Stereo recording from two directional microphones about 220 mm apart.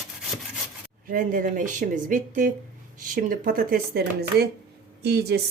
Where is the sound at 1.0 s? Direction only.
40° right (ahead or behind).